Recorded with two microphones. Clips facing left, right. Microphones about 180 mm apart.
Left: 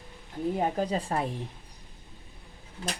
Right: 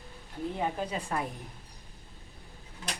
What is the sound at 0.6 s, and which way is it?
Speech, 40° left (ahead or behind).